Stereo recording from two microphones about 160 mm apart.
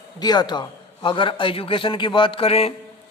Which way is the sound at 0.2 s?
25° left (ahead or behind).